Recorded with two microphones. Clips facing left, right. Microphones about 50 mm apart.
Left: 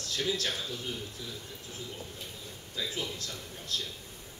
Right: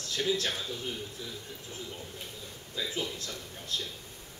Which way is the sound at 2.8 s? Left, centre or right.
Centre.